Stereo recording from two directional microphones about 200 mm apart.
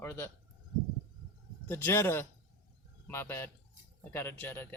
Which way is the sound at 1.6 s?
10° left (ahead or behind).